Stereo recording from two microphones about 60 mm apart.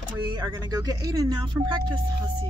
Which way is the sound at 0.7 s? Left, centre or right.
Right.